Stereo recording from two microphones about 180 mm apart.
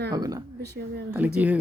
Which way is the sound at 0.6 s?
70° right (ahead or behind).